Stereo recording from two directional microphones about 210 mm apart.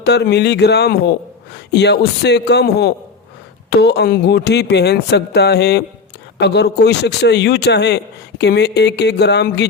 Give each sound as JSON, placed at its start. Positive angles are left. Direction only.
{"t": 0.0, "sound": "a man's voice", "side_deg": 55}